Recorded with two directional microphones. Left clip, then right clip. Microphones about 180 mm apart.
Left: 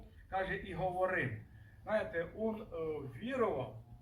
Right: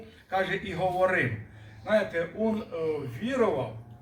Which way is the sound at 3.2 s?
10° right (ahead or behind).